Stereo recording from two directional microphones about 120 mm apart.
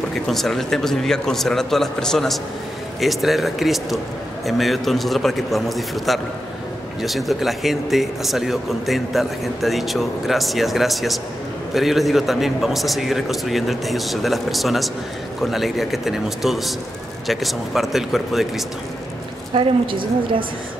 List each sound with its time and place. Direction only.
0.3 s speech: centre (ahead or behind)
19.5 s a woman's voice: 45° right (ahead or behind)